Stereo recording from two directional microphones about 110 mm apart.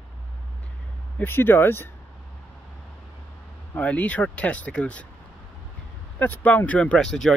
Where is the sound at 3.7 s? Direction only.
15° left (ahead or behind).